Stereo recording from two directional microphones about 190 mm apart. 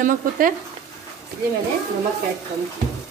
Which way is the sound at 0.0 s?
45° right (ahead or behind).